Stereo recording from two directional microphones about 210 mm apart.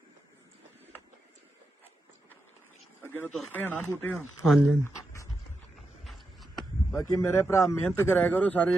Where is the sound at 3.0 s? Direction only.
10° left (ahead or behind).